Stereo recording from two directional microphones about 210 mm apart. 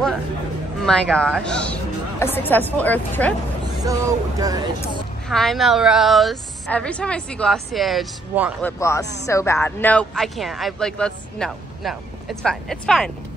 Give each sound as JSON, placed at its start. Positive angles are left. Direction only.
{"t": 0.7, "sound": "speech", "side_deg": 0}
{"t": 3.8, "sound": "speech", "side_deg": -15}
{"t": 5.3, "sound": "a man's voice", "side_deg": 0}
{"t": 8.6, "sound": "a man's voice", "side_deg": 15}